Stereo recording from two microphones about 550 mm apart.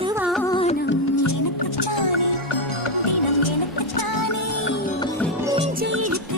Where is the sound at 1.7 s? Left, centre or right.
Left.